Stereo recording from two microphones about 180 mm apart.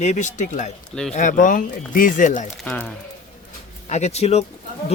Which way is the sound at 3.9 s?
40° left (ahead or behind).